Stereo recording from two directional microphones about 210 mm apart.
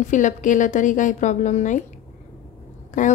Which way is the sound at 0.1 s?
35° left (ahead or behind).